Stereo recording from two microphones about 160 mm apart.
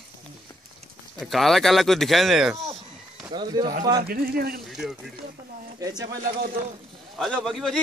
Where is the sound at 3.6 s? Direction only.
25° right (ahead or behind).